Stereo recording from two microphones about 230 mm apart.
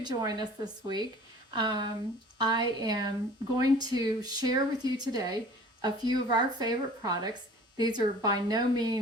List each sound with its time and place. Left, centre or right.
0.0 s speech: centre